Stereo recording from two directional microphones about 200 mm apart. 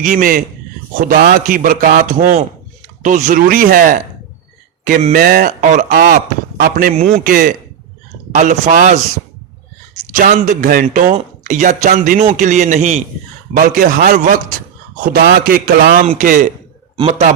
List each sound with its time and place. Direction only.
0.0 s speech: 45° right (ahead or behind)
10.1 s speech: 40° right (ahead or behind)